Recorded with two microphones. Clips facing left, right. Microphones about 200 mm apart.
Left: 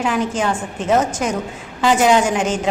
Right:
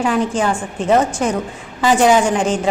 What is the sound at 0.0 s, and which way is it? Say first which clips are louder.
Speech: right 2 dB; 5° left (ahead or behind).